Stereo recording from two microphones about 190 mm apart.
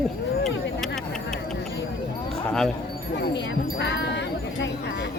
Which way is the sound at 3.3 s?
65° left (ahead or behind).